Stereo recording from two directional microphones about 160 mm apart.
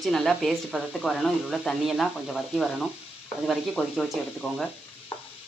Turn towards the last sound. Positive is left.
turn(degrees=35)  # may be behind; listen again after turning